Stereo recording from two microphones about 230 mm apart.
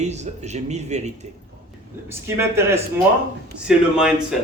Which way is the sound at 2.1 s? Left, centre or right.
Centre.